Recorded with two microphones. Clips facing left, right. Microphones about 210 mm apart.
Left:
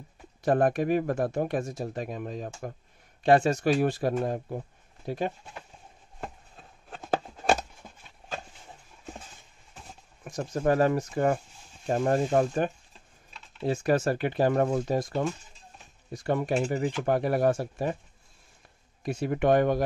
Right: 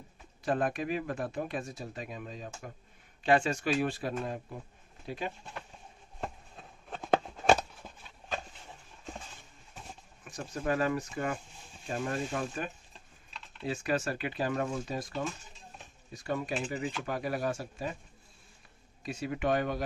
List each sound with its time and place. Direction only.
0.5 s speech: 50° left (ahead or behind)
3.3 s speech: 40° left (ahead or behind)
6.2 s a sound: centre (ahead or behind)
10.2 s speech: 45° left (ahead or behind)
16.6 s speech: 45° left (ahead or behind)
19.0 s speech: 55° left (ahead or behind)